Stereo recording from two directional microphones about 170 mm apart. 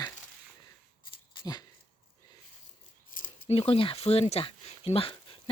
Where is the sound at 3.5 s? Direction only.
35° left (ahead or behind).